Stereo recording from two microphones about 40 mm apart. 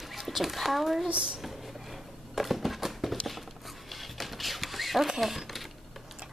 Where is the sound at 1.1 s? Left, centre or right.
Centre.